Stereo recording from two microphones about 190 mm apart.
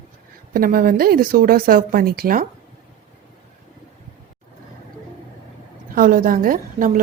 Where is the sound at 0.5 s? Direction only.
50° right (ahead or behind).